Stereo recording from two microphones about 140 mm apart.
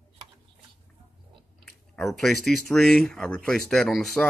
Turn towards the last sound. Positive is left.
turn(degrees=0)  # may be behind; listen again after turning